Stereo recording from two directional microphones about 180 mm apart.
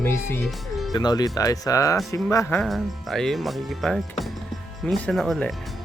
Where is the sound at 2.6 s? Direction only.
Centre (ahead or behind).